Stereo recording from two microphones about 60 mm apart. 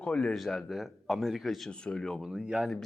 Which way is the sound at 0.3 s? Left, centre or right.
Centre.